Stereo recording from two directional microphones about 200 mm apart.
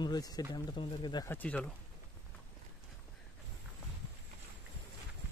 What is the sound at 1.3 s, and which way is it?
Speech, 5° left (ahead or behind).